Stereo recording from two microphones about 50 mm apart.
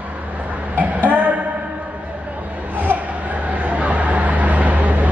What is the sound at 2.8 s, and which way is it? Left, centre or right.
Vehicle, right.